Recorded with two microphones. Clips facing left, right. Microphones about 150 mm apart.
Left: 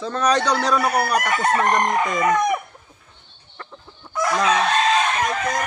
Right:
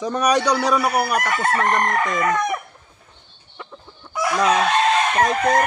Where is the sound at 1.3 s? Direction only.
15° left (ahead or behind).